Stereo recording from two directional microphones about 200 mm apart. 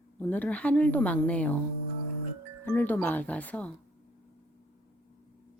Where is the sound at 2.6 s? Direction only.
10° left (ahead or behind).